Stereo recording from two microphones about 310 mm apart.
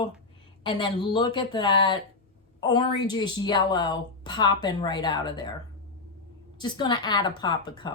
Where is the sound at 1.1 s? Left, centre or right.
Centre.